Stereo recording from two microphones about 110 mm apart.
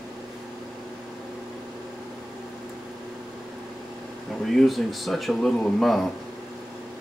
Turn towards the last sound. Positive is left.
turn(degrees=5)  # may be behind; listen again after turning